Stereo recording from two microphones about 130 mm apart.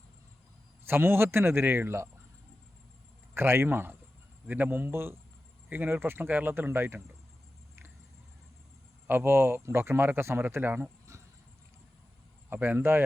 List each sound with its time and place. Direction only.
0.9 s speech: 15° right (ahead or behind)
3.3 s speech: 20° right (ahead or behind)
9.0 s speech: 15° right (ahead or behind)
11.1 s a sound: 20° right (ahead or behind)
12.5 s speech: 15° right (ahead or behind)